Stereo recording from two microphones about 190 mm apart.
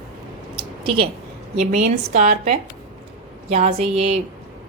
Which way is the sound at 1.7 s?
35° right (ahead or behind).